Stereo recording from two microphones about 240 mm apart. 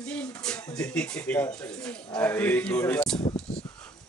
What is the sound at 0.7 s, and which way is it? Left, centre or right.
Speech, centre.